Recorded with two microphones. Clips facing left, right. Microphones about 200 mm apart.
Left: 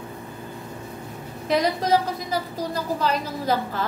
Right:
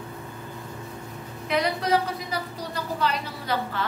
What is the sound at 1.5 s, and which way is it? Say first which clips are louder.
A woman's voice: left 3 dB; 40° left (ahead or behind).